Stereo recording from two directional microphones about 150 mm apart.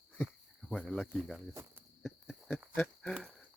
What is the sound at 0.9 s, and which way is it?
Speech, 5° left (ahead or behind).